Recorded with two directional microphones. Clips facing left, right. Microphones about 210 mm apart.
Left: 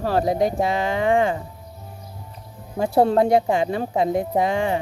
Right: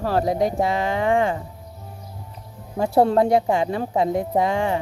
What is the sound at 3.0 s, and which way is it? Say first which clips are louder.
Speech: even; 20° left (ahead or behind).